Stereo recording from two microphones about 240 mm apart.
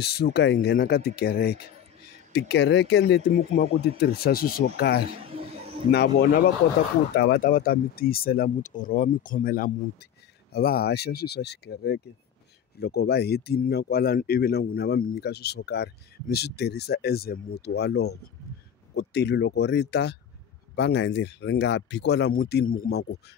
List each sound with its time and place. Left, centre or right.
0.0 s speech: left
5.2 s a sound: right
5.9 s speech: left